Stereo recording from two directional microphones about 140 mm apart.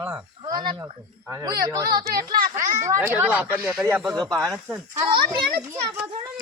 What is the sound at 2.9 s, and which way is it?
Speech, 20° right (ahead or behind).